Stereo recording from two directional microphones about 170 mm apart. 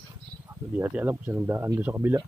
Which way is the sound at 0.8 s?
10° right (ahead or behind).